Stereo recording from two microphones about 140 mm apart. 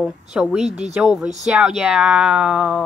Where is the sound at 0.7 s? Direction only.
50° right (ahead or behind).